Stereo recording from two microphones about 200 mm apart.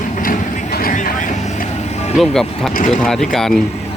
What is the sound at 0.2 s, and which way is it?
Vehicle, 45° left (ahead or behind).